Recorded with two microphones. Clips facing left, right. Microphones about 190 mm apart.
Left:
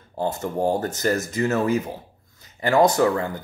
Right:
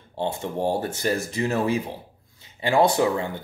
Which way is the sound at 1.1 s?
30° right (ahead or behind).